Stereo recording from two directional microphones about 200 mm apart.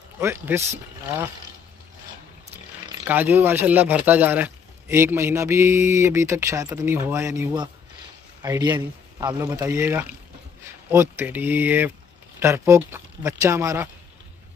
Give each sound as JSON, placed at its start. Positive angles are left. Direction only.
{"t": 0.2, "sound": "speech", "side_deg": -10}
{"t": 2.5, "sound": "speech", "side_deg": -10}